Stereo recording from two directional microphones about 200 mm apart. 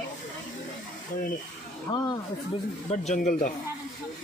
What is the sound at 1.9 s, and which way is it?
Speech, 20° left (ahead or behind).